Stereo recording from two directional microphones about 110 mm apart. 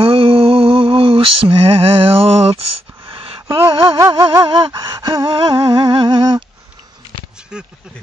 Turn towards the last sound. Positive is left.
turn(degrees=-5)  # may be behind; listen again after turning